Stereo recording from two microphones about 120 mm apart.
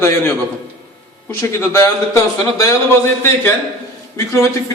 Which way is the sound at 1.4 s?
25° left (ahead or behind).